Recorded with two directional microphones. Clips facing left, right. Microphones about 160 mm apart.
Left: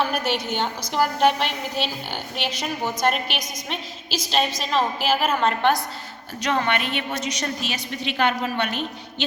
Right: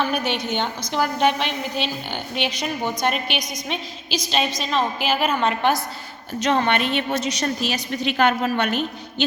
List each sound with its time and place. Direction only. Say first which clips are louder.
0.0 s a woman's voice: right 1 dB; 5° left (ahead or behind)
6.4 s a woman's voice: right 3 dB; 30° right (ahead or behind); by 8.7 s 45° right (ahead or behind)